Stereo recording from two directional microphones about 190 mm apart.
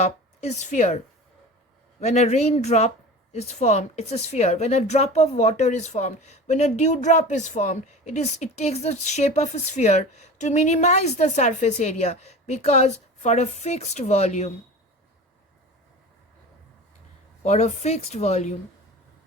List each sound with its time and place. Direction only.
0.0 s speech: 35° left (ahead or behind)
17.4 s speech: 35° left (ahead or behind)